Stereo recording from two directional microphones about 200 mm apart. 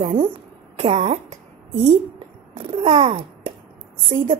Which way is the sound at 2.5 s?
30° right (ahead or behind).